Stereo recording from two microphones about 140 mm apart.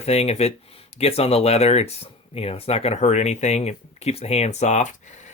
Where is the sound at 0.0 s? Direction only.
45° left (ahead or behind).